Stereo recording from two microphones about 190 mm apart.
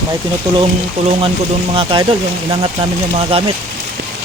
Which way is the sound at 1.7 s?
25° right (ahead or behind).